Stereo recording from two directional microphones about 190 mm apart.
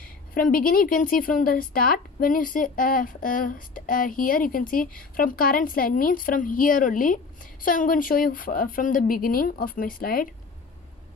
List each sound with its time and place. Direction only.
0.3 s speech: 50° left (ahead or behind)